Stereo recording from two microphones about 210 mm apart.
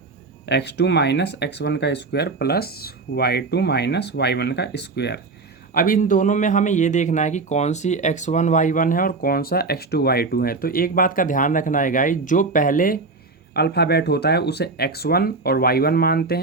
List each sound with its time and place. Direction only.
0.4 s speech: 55° left (ahead or behind)
5.7 s speech: 40° left (ahead or behind)